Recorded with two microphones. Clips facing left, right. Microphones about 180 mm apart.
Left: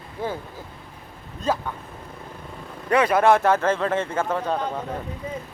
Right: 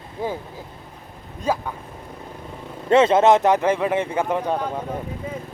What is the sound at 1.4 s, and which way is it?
Speech, 10° right (ahead or behind).